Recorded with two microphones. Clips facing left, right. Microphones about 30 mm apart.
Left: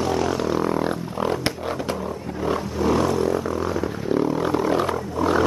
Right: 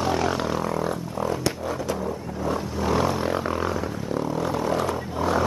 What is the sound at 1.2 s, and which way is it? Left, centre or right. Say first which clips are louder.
Music: left 2 dB; left.